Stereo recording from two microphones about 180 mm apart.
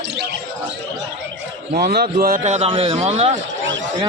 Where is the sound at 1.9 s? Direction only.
60° right (ahead or behind).